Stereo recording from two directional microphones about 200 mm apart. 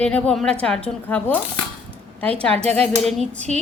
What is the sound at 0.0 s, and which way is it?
A woman's voice, 5° left (ahead or behind).